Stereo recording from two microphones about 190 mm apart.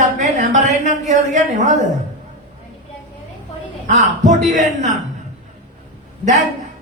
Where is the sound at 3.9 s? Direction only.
40° right (ahead or behind).